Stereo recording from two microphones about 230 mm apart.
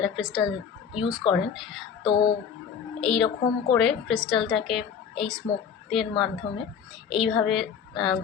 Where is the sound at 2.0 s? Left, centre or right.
Left.